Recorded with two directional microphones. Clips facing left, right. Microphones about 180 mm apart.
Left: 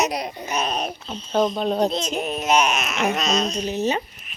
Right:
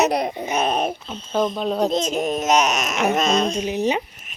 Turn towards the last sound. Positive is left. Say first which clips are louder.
# right 2 dB
turn(degrees=-15)  # may be behind; listen again after turning